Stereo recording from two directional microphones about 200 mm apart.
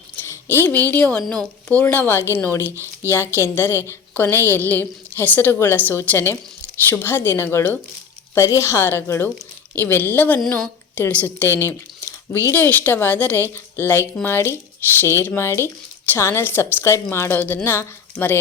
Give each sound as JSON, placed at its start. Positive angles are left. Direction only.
{"t": 0.3, "sound": "a woman's voice", "side_deg": 10}
{"t": 2.7, "sound": "speech", "side_deg": -15}
{"t": 3.1, "sound": "a woman's voice", "side_deg": 10}